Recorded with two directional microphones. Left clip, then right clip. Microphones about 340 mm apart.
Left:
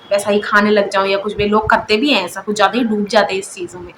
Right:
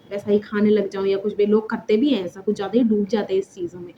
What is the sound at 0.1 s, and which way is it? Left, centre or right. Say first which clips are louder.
Speech: left 9 dB; right.